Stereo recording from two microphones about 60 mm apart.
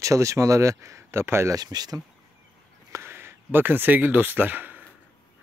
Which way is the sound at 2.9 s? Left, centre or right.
Right.